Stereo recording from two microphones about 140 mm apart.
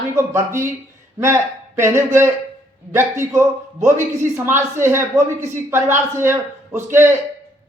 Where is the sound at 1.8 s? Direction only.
20° right (ahead or behind).